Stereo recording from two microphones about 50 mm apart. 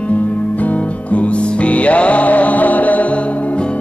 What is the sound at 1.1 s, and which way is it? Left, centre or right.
Music, left.